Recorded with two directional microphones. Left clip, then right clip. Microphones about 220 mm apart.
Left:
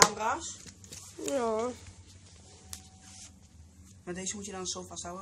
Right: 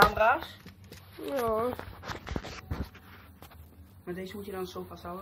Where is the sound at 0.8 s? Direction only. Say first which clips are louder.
Left 1 dB; 20° left (ahead or behind).